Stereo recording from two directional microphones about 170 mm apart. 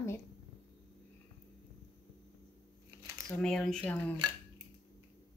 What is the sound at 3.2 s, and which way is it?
Speech, 5° left (ahead or behind).